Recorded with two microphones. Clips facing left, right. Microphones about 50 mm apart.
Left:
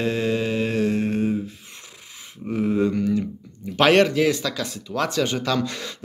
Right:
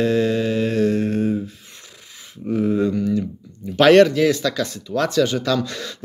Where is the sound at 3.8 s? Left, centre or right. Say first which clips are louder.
Right 4 dB; centre.